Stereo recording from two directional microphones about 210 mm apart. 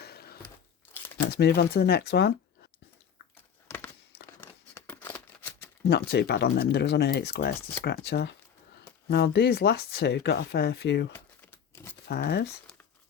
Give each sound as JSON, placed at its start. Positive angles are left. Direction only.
{"t": 0.0, "sound": "a sound", "side_deg": 50}
{"t": 1.3, "sound": "speech", "side_deg": 50}
{"t": 3.3, "sound": "a sound", "side_deg": 10}
{"t": 4.4, "sound": "scissors", "side_deg": 10}
{"t": 5.9, "sound": "speech", "side_deg": 55}
{"t": 11.7, "sound": "crumpling", "side_deg": 10}
{"t": 12.0, "sound": "speech", "side_deg": 50}